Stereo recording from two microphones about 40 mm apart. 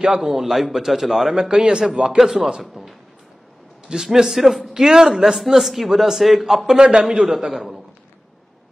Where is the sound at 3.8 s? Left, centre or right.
Centre.